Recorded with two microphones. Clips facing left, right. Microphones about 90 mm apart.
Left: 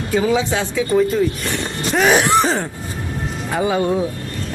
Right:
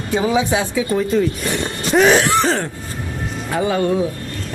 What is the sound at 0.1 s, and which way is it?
Speech, 20° right (ahead or behind).